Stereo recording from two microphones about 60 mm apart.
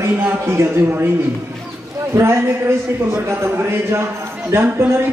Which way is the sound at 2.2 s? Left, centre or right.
Right.